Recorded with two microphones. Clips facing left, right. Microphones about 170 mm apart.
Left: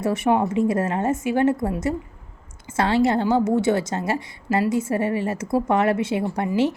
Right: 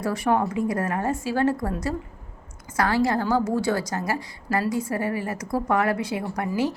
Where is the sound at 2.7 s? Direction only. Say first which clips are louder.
Left 3 dB; 25° left (ahead or behind).